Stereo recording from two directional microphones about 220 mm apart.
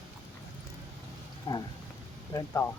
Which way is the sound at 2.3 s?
10° left (ahead or behind).